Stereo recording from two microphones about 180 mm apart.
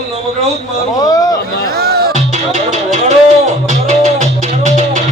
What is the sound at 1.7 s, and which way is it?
Speech, 60° right (ahead or behind).